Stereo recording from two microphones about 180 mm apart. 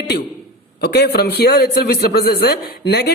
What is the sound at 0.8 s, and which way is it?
A man's voice, 65° left (ahead or behind).